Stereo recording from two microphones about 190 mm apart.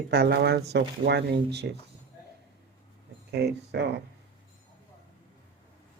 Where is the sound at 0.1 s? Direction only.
60° right (ahead or behind).